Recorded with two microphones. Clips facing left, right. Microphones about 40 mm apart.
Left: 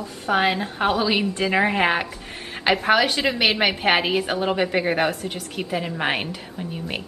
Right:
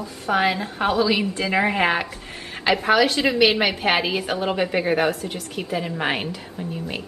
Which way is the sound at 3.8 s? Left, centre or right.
Left.